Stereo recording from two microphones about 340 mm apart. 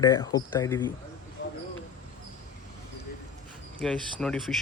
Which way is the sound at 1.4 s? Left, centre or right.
Left.